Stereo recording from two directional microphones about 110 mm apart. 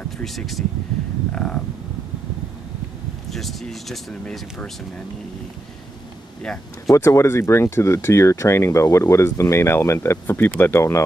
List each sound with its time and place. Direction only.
0.2 s speech: centre (ahead or behind)
3.3 s speech: centre (ahead or behind)
6.9 s speech: 25° left (ahead or behind)